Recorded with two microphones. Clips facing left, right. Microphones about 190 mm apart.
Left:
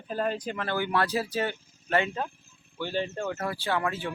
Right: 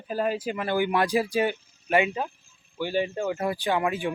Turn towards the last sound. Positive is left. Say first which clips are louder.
# right 4 dB
turn(degrees=-15)  # may be behind; listen again after turning